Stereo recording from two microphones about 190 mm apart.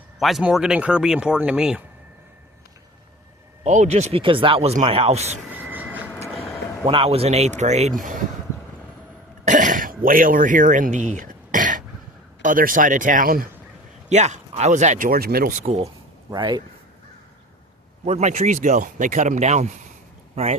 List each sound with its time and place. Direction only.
0.2 s speech: centre (ahead or behind)
3.6 s speech: 40° right (ahead or behind)
5.5 s a sound: 10° right (ahead or behind)
6.5 s a sound: 15° left (ahead or behind)
6.8 s speech: 30° right (ahead or behind)
9.4 s a sound: 40° right (ahead or behind)
12.4 s a man's voice: 45° right (ahead or behind)
14.1 s speech: 35° right (ahead or behind)
16.3 s speech: 25° right (ahead or behind)
18.0 s speech: 35° right (ahead or behind)